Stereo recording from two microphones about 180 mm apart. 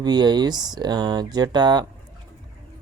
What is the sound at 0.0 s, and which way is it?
Speech, 25° right (ahead or behind).